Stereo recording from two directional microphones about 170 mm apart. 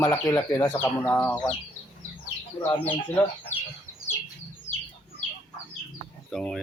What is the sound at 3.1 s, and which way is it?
Speech, 10° left (ahead or behind).